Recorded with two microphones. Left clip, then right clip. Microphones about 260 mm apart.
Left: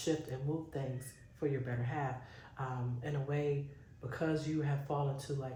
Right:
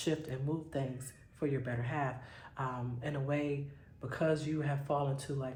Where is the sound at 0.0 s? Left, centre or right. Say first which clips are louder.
Even; right.